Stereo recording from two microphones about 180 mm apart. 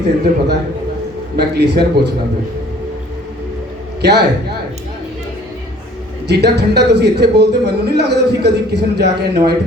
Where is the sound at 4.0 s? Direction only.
65° right (ahead or behind).